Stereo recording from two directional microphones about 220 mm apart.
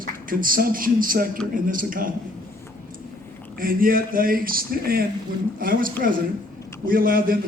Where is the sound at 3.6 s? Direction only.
40° right (ahead or behind).